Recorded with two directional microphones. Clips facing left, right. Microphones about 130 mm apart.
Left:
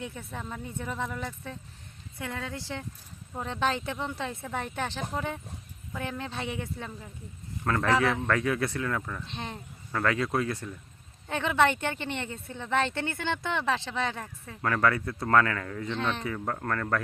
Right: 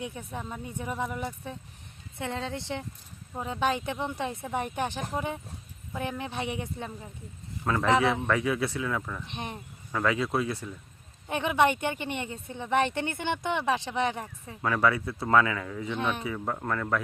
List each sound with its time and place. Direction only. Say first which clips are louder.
0.0 s a woman's voice: right 1 dB; 15° right (ahead or behind)
3.3 s speech: right 1 dB; 10° right (ahead or behind)
7.6 s speech: even; 5° right (ahead or behind)
7.9 s speech: right 2 dB; 20° right (ahead or behind)
9.2 s speech: right 1 dB; 15° right (ahead or behind)